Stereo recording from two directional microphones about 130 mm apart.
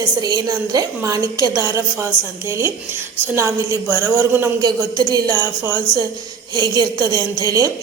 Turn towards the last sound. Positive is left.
turn(degrees=-25)  # may be behind; listen again after turning